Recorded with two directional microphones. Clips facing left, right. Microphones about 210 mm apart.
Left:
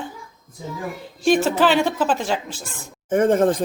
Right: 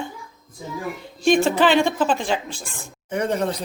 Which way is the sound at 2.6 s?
50° left (ahead or behind).